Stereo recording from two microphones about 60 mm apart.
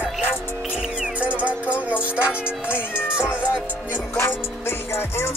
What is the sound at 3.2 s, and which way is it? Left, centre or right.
Speech, centre.